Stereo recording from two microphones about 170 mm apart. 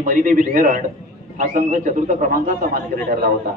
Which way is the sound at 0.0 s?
50° right (ahead or behind).